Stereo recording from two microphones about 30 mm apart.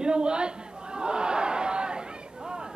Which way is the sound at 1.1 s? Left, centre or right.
Right.